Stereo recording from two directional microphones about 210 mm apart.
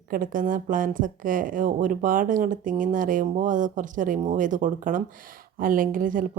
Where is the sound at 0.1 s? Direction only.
40° right (ahead or behind).